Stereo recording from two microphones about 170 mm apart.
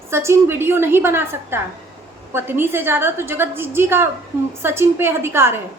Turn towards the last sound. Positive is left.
turn(degrees=-15)  # may be behind; listen again after turning